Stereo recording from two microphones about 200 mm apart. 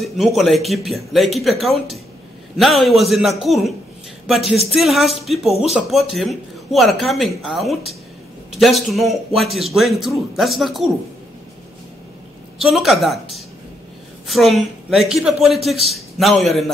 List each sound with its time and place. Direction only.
0.0 s a man's voice: centre (ahead or behind)
12.5 s a man's voice: centre (ahead or behind)